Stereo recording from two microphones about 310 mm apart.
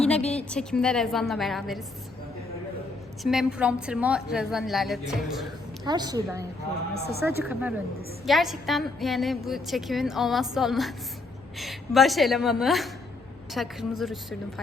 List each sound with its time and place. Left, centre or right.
0.2 s speech: centre
0.5 s a woman's voice: centre
3.2 s a woman's voice: centre
5.8 s a woman's voice: centre
7.2 s a woman's voice: centre